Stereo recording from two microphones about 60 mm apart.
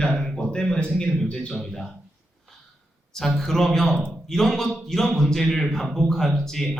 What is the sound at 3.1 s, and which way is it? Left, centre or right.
A man's voice, centre.